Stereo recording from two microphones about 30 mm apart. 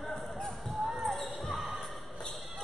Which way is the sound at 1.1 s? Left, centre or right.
Centre.